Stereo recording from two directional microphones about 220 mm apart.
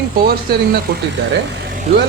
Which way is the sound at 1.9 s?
30° right (ahead or behind).